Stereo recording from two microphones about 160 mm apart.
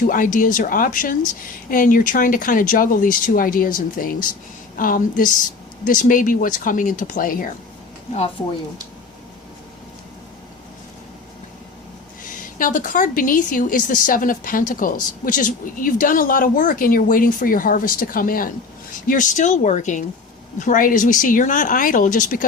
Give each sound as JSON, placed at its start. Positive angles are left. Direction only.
{"t": 0.1, "sound": "speech", "side_deg": 60}
{"t": 12.2, "sound": "speech", "side_deg": 55}